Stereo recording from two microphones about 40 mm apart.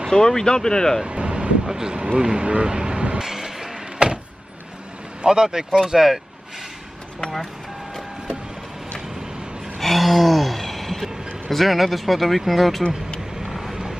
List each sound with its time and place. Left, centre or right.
0.1 s speech: centre
1.0 s vehicle: right
1.7 s speech: centre
3.2 s a sound: centre
5.2 s speech: centre
9.8 s a sound: centre
13.4 s vehicle: centre